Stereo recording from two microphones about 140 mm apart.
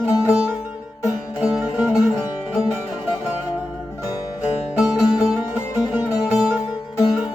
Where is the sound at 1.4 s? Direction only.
10° right (ahead or behind).